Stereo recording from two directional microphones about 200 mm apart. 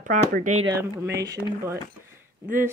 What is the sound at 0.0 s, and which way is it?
Speech, 40° right (ahead or behind).